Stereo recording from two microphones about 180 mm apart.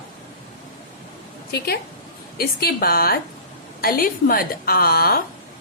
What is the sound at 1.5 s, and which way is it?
A woman's voice, 60° left (ahead or behind).